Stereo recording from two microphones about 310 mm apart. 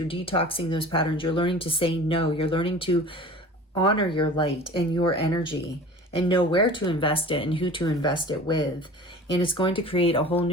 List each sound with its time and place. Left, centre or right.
0.1 s speech: centre